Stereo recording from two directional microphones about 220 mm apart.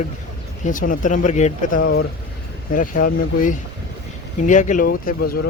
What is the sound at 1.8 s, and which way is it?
Speech, 50° left (ahead or behind).